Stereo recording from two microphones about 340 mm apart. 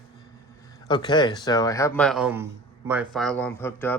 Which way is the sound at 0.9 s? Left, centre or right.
Centre.